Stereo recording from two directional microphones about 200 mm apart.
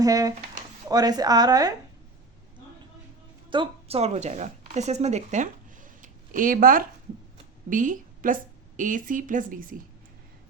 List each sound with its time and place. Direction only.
0.0 s a woman's voice: 15° right (ahead or behind)
3.5 s a woman's voice: 25° right (ahead or behind)